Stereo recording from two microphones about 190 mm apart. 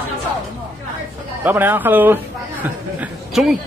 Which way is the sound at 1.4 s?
10° right (ahead or behind).